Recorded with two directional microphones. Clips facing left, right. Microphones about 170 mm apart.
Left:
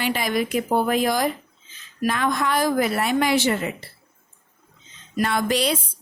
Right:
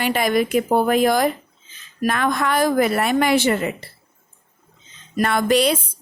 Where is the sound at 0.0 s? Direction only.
55° right (ahead or behind).